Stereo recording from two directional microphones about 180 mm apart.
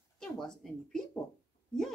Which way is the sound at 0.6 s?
Centre (ahead or behind).